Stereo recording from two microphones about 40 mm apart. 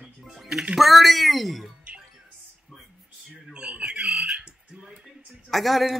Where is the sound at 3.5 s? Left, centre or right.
Right.